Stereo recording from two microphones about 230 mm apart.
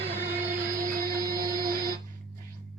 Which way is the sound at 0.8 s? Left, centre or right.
Right.